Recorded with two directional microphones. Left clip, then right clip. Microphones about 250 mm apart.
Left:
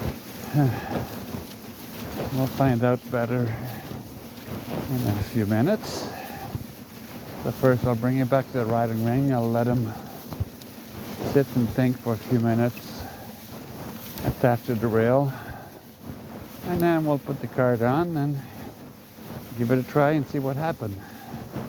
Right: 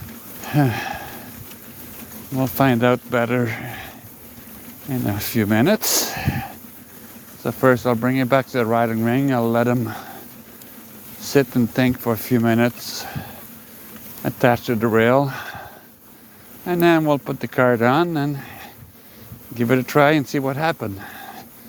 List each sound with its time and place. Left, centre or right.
0.4 s speech: right
2.4 s speech: right
5.2 s speech: right
7.4 s speech: right
11.3 s speech: right
14.4 s speech: right
16.6 s speech: right
19.5 s speech: right